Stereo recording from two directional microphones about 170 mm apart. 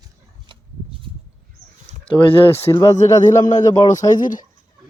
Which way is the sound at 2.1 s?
30° left (ahead or behind).